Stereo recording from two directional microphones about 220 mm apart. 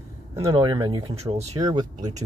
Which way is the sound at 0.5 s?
20° right (ahead or behind).